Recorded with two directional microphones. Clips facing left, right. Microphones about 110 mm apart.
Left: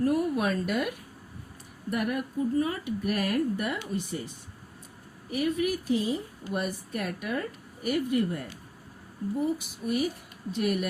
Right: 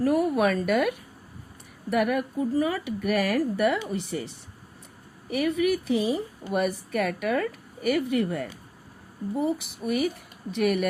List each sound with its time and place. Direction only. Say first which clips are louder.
0.0 s speech: right 4 dB; 70° right (ahead or behind)
1.9 s speech: right 5 dB; 80° right
5.3 s speech: right 4 dB; 70° right (ahead or behind)
6.5 s speech: right 5 dB; 65° right (ahead or behind); by 8.4 s 80° right
9.8 s speech: right 2 dB; 50° right (ahead or behind)
10.6 s speech: right 4 dB; 65° right (ahead or behind)